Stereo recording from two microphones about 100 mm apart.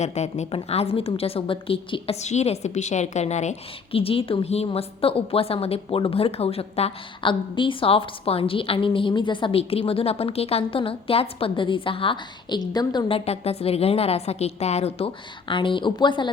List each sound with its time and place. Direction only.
0.5 s a woman's voice: 85° left
3.9 s a woman's voice: 70° left (ahead or behind); by 13.1 s 40° left (ahead or behind)
13.1 s a woman's voice: 80° left; by 16.3 s 50° left (ahead or behind)